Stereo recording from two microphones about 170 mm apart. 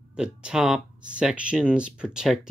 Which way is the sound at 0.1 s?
5° right (ahead or behind).